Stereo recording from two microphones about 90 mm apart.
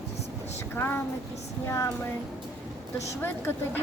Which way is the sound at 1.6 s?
35° left (ahead or behind).